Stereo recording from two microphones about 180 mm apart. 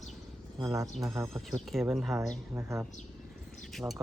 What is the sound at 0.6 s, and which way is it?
Speech, 15° right (ahead or behind).